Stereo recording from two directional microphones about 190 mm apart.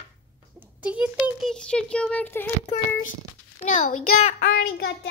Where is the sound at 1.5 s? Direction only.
5° left (ahead or behind).